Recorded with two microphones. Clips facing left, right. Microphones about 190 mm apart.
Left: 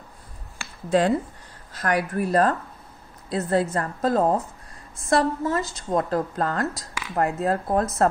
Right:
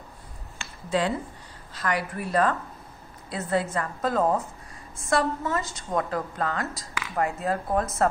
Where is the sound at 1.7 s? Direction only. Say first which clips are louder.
Left 4 dB; 45° left (ahead or behind).